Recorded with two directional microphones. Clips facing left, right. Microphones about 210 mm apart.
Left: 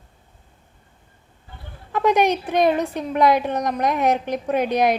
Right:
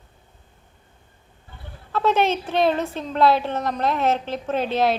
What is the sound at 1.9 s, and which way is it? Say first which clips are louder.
A woman's voice: left 2 dB; 15° left (ahead or behind).